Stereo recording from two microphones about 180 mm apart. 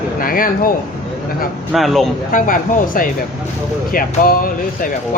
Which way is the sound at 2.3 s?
50° left (ahead or behind).